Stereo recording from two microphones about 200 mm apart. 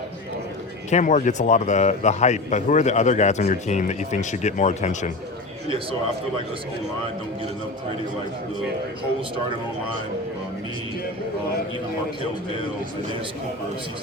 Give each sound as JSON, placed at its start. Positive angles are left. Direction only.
{"t": 0.9, "sound": "a man's voice", "side_deg": 35}